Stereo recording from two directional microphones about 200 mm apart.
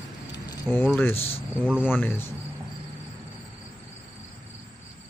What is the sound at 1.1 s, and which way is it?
Speech, 30° left (ahead or behind).